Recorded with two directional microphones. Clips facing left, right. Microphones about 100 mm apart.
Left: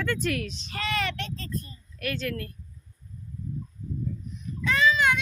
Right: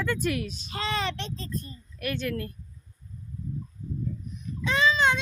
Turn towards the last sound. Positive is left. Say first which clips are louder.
# even
turn(degrees=-25)  # may be behind; listen again after turning